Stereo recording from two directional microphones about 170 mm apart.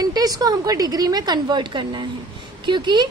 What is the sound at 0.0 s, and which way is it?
A woman's voice, 20° right (ahead or behind).